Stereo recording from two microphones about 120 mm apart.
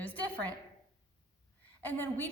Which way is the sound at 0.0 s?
10° left (ahead or behind).